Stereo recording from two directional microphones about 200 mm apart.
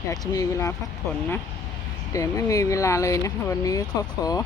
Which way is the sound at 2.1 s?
15° left (ahead or behind).